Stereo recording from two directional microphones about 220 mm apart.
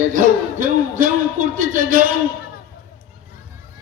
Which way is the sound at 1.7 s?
40° right (ahead or behind).